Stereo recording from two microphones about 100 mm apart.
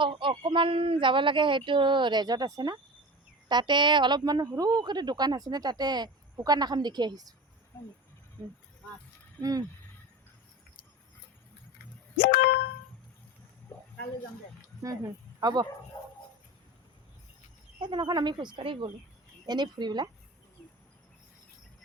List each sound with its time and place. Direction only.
0.0 s a woman's voice: 55° right (ahead or behind)
9.4 s speech: 40° right (ahead or behind)
14.8 s speech: 35° right (ahead or behind)
15.9 s dog: 45° left (ahead or behind)
17.7 s a woman's voice: 50° right (ahead or behind)